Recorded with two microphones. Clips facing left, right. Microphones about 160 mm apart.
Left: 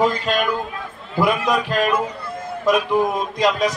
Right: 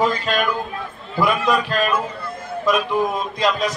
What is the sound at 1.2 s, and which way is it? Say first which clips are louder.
Speech: even; 15° left (ahead or behind).